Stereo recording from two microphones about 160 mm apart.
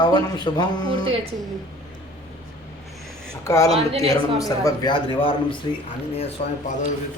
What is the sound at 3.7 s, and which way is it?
Speech, 40° right (ahead or behind).